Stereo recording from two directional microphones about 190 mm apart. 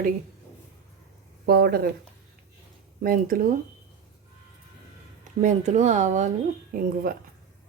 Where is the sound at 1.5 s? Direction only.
55° right (ahead or behind).